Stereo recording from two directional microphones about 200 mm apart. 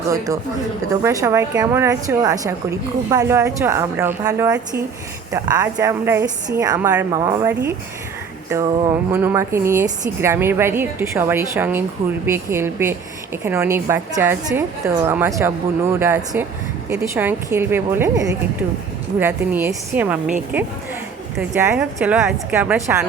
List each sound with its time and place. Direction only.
1.0 s a woman's voice: 15° right (ahead or behind)
19.2 s a woman's voice: 10° right (ahead or behind)